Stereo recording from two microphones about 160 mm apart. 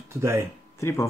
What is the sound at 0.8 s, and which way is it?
Speech, 15° left (ahead or behind).